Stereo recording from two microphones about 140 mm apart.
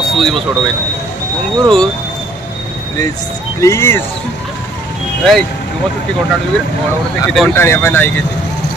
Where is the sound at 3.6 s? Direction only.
20° left (ahead or behind).